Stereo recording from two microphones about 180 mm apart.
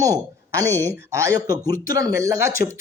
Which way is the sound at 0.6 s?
10° left (ahead or behind).